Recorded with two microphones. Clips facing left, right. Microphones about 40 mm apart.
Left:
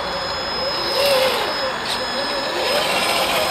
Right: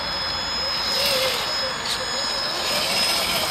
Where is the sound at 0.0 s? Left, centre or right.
Centre.